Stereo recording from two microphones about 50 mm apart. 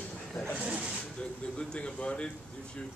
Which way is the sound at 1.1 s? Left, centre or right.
Left.